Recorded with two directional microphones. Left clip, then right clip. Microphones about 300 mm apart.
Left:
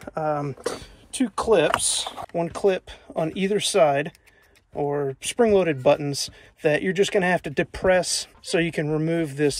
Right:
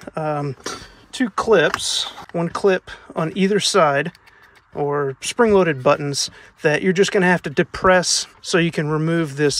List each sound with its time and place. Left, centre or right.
0.0 s speech: centre